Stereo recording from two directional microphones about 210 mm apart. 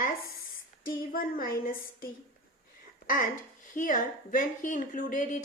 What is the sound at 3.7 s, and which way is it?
Speech, 40° left (ahead or behind).